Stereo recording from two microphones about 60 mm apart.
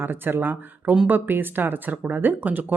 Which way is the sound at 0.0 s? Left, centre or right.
Right.